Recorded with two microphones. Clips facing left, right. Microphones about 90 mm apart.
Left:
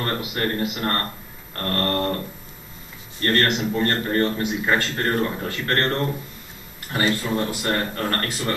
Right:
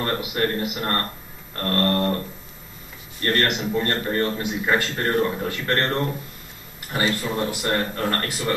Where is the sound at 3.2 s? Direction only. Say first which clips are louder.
Left 2 dB; 10° right (ahead or behind).